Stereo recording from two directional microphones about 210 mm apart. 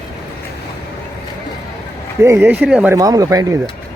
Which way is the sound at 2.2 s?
10° right (ahead or behind).